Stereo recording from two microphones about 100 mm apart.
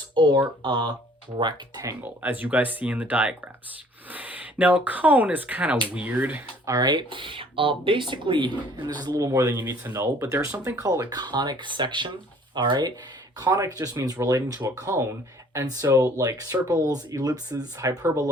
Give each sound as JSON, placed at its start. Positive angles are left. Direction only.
{"t": 0.1, "sound": "speech", "side_deg": -50}
{"t": 2.0, "sound": "speech", "side_deg": -15}
{"t": 6.7, "sound": "speech", "side_deg": -40}
{"t": 11.1, "sound": "speech", "side_deg": -45}